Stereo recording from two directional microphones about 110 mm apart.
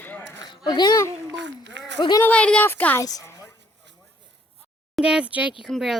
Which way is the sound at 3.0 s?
30° left (ahead or behind).